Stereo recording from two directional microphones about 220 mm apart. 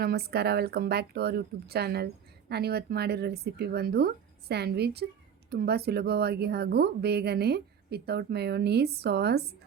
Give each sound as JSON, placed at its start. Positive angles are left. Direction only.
{"t": 0.0, "sound": "a woman's voice", "side_deg": -45}